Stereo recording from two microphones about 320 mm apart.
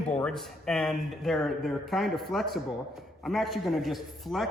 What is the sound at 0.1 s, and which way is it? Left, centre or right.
A man's voice, centre.